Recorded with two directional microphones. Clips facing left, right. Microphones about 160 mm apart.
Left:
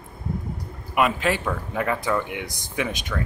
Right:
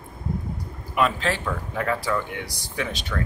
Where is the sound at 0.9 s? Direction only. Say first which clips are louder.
Left 1 dB; 15° left (ahead or behind).